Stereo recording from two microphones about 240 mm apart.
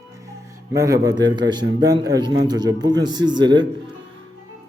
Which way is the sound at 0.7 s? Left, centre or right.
Centre.